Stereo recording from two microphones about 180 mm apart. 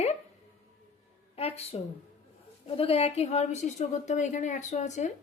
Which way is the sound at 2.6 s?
35° left (ahead or behind).